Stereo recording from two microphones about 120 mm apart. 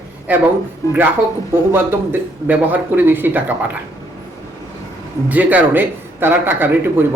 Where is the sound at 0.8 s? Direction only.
25° left (ahead or behind).